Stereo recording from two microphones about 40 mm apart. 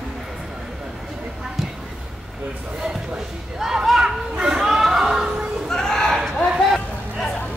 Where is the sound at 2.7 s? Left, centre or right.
Centre.